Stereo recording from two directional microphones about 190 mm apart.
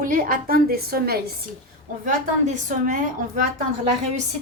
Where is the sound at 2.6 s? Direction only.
45° right (ahead or behind).